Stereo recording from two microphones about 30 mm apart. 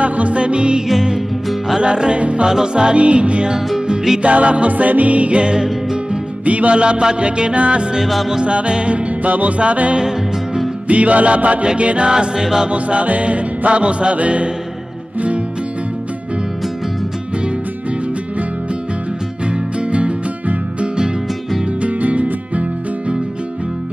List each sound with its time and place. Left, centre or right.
0.0 s music: right
5.4 s music: right
6.4 s music: right
6.7 s music: right
9.2 s music: right
9.6 s music: right
9.9 s music: right
10.9 s music: right
11.6 s music: right
12.1 s music: right
12.6 s music: right
19.9 s music: right